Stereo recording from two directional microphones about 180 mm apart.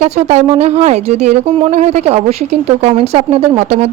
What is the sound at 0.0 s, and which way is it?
Speech, 40° right (ahead or behind).